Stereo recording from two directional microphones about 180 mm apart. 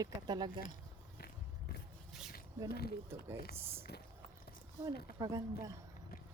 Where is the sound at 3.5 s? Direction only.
10° right (ahead or behind).